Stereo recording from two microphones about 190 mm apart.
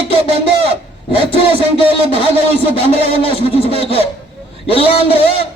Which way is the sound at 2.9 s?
30° left (ahead or behind).